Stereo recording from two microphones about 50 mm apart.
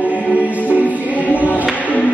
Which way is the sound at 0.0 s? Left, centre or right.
Right.